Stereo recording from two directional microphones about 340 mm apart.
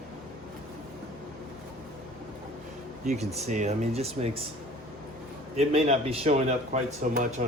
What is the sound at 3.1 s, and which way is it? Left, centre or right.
Speech, centre.